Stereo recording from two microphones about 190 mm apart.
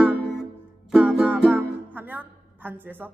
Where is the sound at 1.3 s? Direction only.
10° right (ahead or behind).